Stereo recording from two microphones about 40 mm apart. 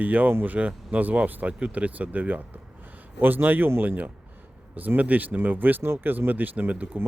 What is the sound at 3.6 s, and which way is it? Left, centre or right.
Speech, right.